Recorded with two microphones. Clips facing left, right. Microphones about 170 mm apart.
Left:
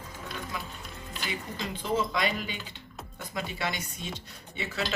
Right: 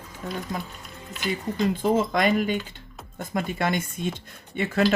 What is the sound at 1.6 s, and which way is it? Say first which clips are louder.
Speech: right 8 dB; 50° right (ahead or behind).